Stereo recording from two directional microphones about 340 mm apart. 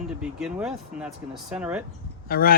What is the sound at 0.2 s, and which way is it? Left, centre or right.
Speech, centre.